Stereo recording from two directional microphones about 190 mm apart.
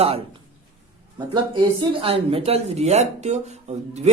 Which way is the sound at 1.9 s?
30° right (ahead or behind).